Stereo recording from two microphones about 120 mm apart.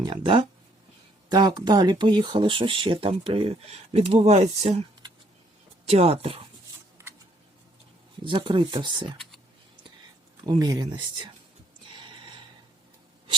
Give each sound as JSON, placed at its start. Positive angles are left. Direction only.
{"t": 0.0, "sound": "speech", "side_deg": -40}
{"t": 8.2, "sound": "speech", "side_deg": -45}
{"t": 10.4, "sound": "speech", "side_deg": -35}
{"t": 11.9, "sound": "a sound", "side_deg": -40}